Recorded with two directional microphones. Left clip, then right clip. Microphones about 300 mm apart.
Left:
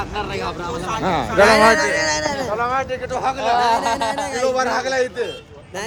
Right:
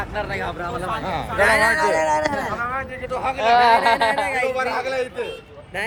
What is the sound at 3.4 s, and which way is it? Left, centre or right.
Speech, right.